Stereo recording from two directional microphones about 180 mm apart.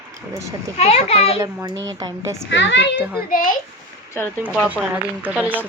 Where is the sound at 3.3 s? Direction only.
50° left (ahead or behind).